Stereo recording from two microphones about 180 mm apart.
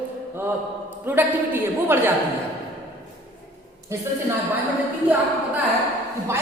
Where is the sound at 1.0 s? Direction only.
10° right (ahead or behind).